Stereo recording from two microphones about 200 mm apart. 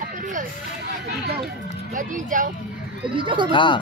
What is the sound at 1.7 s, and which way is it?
Speech, 40° right (ahead or behind).